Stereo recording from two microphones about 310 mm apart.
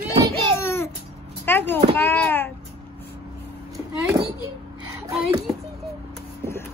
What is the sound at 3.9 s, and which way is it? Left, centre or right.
Speech, centre.